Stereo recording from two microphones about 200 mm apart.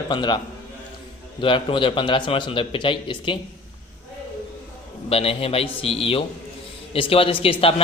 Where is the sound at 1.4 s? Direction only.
25° left (ahead or behind).